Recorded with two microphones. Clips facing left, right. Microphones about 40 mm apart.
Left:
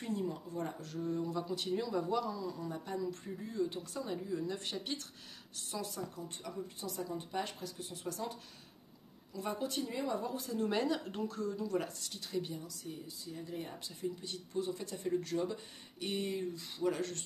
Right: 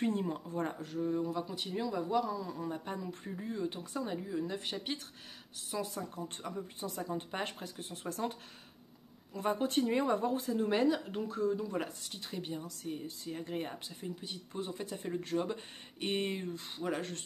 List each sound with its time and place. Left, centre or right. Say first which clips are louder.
0.0 s speech: right 4 dB; right
0.8 s speech: right 2 dB; centre
2.3 s speech: right 2 dB; right
5.9 s speech: right 2 dB; right
10.7 s speech: right 5 dB; centre
11.2 s speech: right 6 dB; right
12.6 s speech: right 5 dB; right
13.8 s speech: left 2 dB; right
14.5 s speech: left 2 dB; right
16.8 s speech: left 2 dB; right